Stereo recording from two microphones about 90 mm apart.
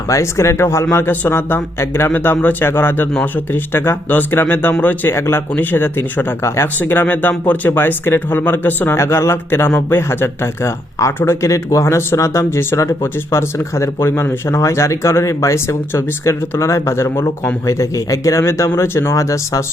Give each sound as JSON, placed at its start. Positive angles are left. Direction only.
{"t": 0.1, "sound": "speech", "side_deg": 35}